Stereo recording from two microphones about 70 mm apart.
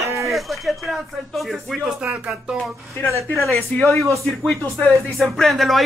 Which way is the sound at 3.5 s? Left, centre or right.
Centre.